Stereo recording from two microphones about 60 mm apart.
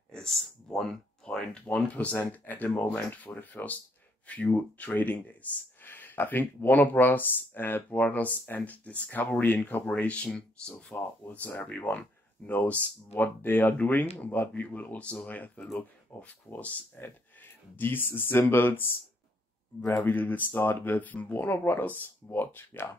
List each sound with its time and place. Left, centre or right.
0.1 s a sound: centre
1.7 s speech: left
10.9 s speech: left